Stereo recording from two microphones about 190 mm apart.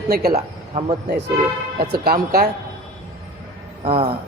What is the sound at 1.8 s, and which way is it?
Speech, 55° right (ahead or behind).